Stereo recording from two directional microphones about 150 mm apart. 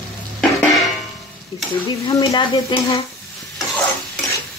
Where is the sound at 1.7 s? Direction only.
30° left (ahead or behind).